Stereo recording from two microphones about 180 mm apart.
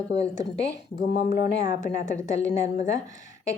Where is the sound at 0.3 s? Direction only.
80° left.